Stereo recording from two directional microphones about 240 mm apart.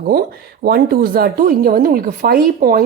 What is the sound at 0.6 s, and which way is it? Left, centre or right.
Speech, right.